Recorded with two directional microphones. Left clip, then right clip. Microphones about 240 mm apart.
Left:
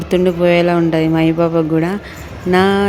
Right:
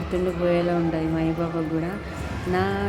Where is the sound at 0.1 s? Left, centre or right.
Left.